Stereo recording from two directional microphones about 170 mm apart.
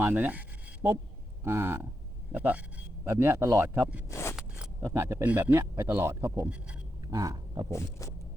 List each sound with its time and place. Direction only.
0.0 s a sound: 10° right (ahead or behind)
1.5 s speech: 15° right (ahead or behind)
4.1 s a sound: 15° left (ahead or behind)
4.8 s speech: 15° right (ahead or behind)
7.1 s speech: 20° right (ahead or behind)
7.7 s vehicle: 20° left (ahead or behind)